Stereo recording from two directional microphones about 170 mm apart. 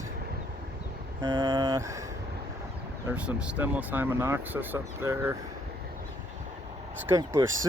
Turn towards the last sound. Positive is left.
turn(degrees=-15)  # may be behind; listen again after turning